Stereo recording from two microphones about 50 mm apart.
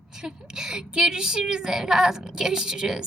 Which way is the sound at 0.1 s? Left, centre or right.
Centre.